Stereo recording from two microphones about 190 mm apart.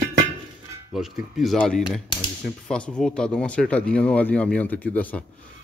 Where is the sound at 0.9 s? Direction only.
Centre (ahead or behind).